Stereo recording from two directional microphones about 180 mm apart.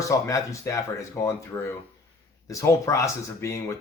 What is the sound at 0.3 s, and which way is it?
Speech, 15° left (ahead or behind).